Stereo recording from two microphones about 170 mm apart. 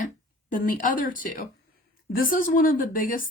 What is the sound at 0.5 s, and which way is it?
A woman's voice, 50° left (ahead or behind).